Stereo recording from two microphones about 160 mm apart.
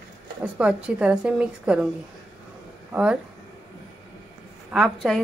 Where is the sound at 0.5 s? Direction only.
5° right (ahead or behind).